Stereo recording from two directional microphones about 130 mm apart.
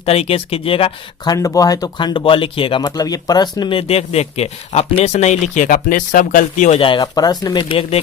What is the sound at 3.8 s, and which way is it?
Speech, 50° left (ahead or behind).